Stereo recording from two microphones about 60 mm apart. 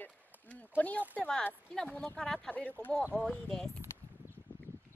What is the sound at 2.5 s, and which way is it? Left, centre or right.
Speech, left.